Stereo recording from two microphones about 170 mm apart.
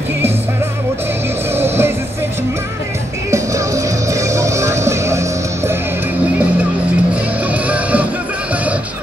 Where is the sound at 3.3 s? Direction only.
20° right (ahead or behind).